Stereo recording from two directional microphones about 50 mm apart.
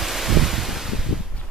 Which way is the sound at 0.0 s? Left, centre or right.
Centre.